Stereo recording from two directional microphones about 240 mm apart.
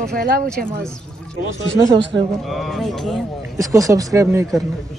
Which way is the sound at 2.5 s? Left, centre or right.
Centre.